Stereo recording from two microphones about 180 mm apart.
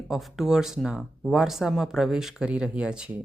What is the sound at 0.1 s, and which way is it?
Speech, centre (ahead or behind).